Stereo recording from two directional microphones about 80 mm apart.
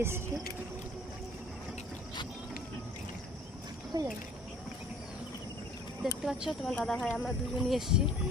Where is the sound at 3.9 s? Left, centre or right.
Right.